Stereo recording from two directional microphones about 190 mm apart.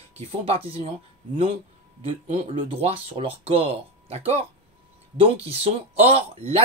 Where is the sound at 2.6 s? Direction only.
30° right (ahead or behind).